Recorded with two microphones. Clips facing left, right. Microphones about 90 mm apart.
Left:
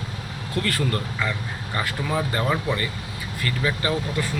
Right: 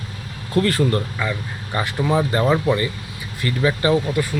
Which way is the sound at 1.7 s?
20° right (ahead or behind).